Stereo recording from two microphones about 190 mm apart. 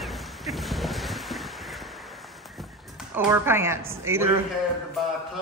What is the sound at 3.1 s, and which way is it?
A woman's voice, 10° right (ahead or behind).